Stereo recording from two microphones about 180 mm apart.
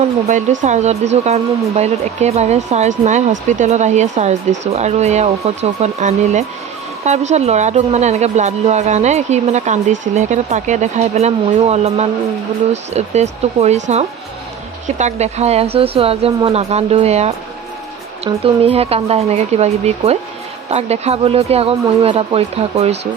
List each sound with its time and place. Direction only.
0.6 s speech: 40° right (ahead or behind)
18.4 s speech: 30° right (ahead or behind)